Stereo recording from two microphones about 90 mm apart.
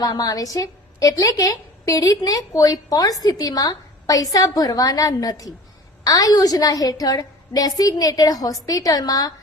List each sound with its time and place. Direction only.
0.0 s a woman's voice: 45° left (ahead or behind)